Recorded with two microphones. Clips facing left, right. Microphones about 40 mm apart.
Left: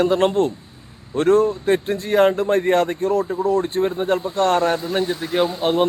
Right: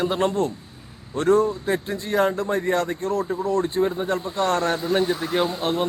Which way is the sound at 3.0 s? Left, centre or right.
Centre.